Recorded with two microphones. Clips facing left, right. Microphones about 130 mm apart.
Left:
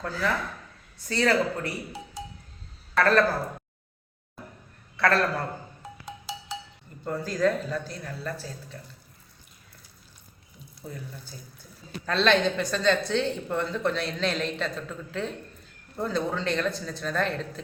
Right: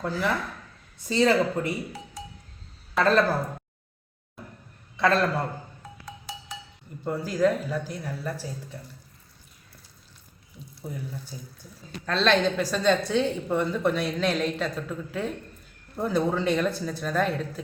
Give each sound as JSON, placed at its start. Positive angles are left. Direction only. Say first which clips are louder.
{"t": 0.0, "sound": "a woman's voice", "louder": "right 1 dB", "side_deg": -15}
{"t": 3.0, "sound": "speech", "louder": "even", "side_deg": -20}
{"t": 4.9, "sound": "a man's voice", "louder": "right 1 dB", "side_deg": -20}
{"t": 7.0, "sound": "a woman's voice", "louder": "right 2 dB", "side_deg": -10}
{"t": 10.9, "sound": "a woman's voice", "louder": "right 4 dB", "side_deg": -15}
{"t": 12.0, "sound": "a woman's voice", "louder": "even", "side_deg": 0}